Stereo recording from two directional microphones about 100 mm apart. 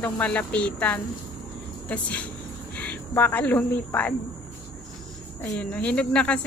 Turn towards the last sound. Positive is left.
turn(degrees=10)  # may be behind; listen again after turning